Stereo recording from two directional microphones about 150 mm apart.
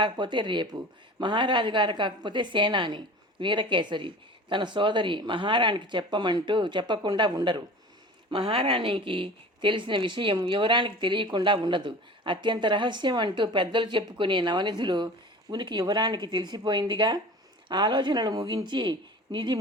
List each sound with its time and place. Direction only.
0.0 s a woman's voice: 30° right (ahead or behind)